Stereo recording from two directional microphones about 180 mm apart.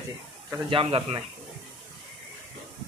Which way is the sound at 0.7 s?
30° right (ahead or behind).